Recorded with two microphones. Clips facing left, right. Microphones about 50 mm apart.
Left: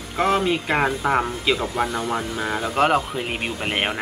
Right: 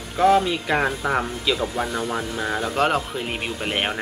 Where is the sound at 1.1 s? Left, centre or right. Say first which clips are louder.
Left 2 dB; centre.